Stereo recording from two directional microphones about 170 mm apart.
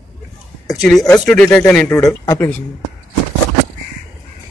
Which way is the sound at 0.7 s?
Centre (ahead or behind).